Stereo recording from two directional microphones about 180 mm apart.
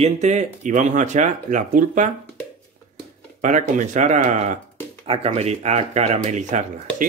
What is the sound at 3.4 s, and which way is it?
Speech, 45° right (ahead or behind).